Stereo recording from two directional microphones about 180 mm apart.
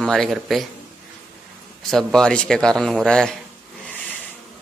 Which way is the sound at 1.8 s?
5° left (ahead or behind).